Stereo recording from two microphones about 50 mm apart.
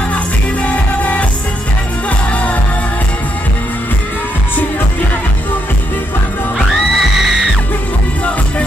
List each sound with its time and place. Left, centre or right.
0.1 s music: left
6.7 s music: centre